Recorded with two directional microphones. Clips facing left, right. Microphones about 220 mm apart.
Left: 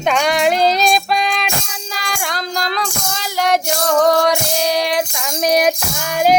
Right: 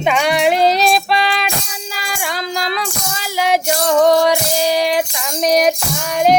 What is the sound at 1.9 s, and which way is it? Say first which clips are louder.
Child singing: even; 5° right (ahead or behind).